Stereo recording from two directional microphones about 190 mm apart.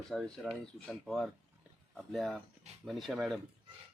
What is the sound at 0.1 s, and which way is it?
Speech, centre (ahead or behind).